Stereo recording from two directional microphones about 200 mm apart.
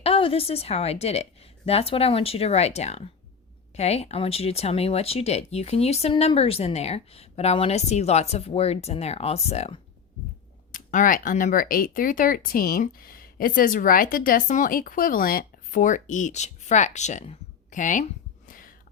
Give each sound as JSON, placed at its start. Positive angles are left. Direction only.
{"t": 0.0, "sound": "a woman's voice", "side_deg": 25}
{"t": 10.7, "sound": "speech", "side_deg": 40}